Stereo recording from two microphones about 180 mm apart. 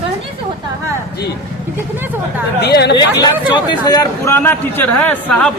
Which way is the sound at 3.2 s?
20° left (ahead or behind).